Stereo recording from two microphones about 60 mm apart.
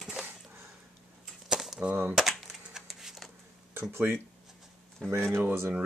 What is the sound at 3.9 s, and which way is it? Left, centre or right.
Speech, right.